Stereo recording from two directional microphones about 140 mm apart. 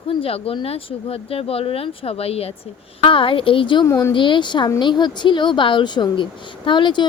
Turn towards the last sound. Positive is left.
turn(degrees=35)  # may be behind; listen again after turning